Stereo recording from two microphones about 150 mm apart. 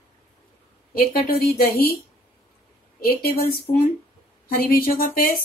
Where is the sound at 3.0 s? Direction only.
90° left.